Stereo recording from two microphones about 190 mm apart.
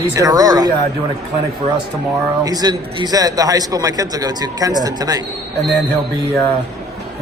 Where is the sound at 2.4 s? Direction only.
20° right (ahead or behind).